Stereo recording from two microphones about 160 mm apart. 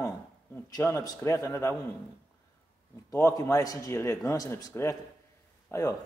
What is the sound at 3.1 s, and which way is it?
A man's voice, 20° left (ahead or behind).